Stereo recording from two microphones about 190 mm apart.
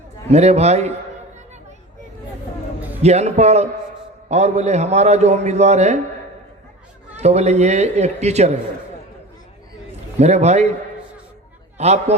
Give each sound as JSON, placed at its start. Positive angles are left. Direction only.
{"t": 0.3, "sound": "a man's voice", "side_deg": -35}
{"t": 3.0, "sound": "a man's voice", "side_deg": -35}
{"t": 7.2, "sound": "a man's voice", "side_deg": -35}
{"t": 10.2, "sound": "a man's voice", "side_deg": -35}
{"t": 11.8, "sound": "a man's voice", "side_deg": -35}